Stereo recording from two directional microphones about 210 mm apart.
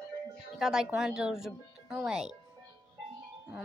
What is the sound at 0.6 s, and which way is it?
A woman's voice, 5° right (ahead or behind).